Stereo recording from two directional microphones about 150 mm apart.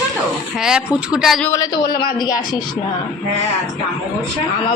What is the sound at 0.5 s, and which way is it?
Speech, 5° right (ahead or behind).